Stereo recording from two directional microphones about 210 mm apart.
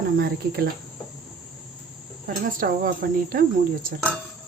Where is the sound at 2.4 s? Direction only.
40° right (ahead or behind).